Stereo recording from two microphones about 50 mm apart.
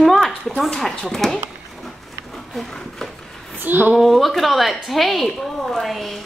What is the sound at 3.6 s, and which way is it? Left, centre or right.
Speech, right.